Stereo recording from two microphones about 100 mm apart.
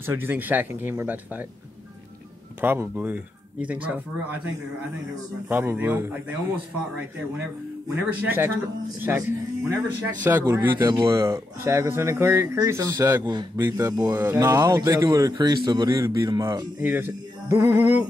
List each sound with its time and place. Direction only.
0.0 s speech: 20° right (ahead or behind)
2.6 s speech: 20° right (ahead or behind)
5.5 s speech: 20° right (ahead or behind)
8.1 s speech: 20° right (ahead or behind)
13.2 s a man's voice: 50° right (ahead or behind)
13.6 s speech: 30° right (ahead or behind)
16.8 s speech: 20° right (ahead or behind)